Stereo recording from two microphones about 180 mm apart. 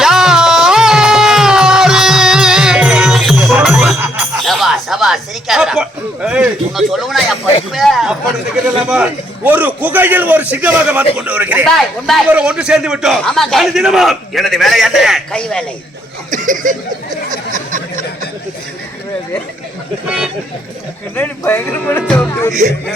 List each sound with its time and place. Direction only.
0.0 s music: 5° right (ahead or behind)
7.7 s a man's voice: centre (ahead or behind)
16.3 s chuckle: 45° right (ahead or behind)
17.5 s a sound: 45° right (ahead or behind)
20.1 s a man's voice: 5° right (ahead or behind)
21.2 s a man's voice: 10° left (ahead or behind)
22.6 s speech: 40° right (ahead or behind)